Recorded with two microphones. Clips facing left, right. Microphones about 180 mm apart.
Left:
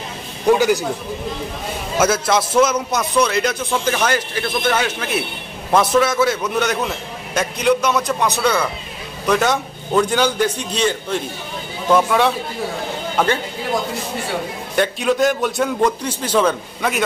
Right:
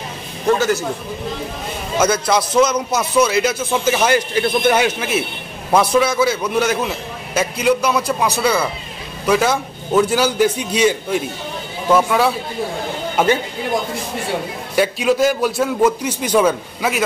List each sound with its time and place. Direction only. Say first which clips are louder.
0.5 s a man's voice: left 2 dB; 10° left (ahead or behind)
2.0 s a man's voice: right 1 dB; 5° left (ahead or behind)
13.1 s speech: right 3 dB; 10° right (ahead or behind)
14.8 s a man's voice: right 2 dB; 5° right (ahead or behind)